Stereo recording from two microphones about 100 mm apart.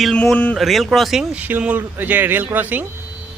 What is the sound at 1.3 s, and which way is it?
Speech, 15° right (ahead or behind).